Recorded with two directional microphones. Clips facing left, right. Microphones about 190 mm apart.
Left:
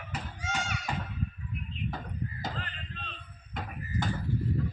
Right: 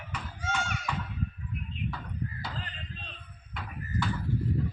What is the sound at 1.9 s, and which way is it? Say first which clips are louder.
Chop: even; 45° left (ahead or behind).